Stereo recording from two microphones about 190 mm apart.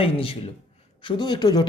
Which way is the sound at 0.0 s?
30° left (ahead or behind).